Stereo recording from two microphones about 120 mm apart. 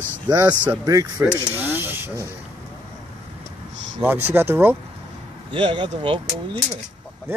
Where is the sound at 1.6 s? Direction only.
15° right (ahead or behind).